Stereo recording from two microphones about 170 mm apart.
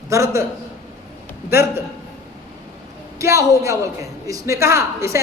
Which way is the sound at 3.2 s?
15° right (ahead or behind).